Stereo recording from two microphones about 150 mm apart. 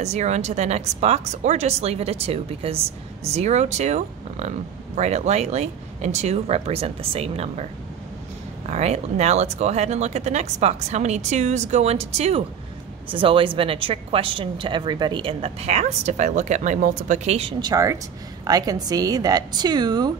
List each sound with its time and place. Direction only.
0.0 s speech: 50° right (ahead or behind)
8.6 s a woman's voice: 50° right (ahead or behind)
17.6 s a woman's voice: 25° right (ahead or behind)